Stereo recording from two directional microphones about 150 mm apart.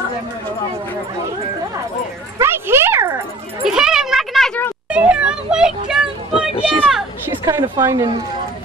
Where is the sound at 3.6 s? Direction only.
5° right (ahead or behind).